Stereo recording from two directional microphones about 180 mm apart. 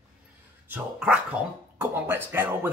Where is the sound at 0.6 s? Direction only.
10° right (ahead or behind).